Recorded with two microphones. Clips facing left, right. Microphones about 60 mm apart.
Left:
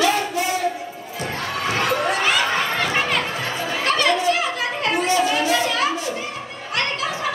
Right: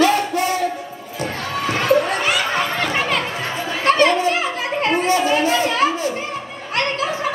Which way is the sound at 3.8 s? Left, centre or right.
Right.